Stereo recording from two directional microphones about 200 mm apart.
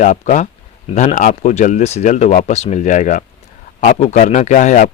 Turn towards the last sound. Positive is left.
turn(degrees=40)  # may be behind; listen again after turning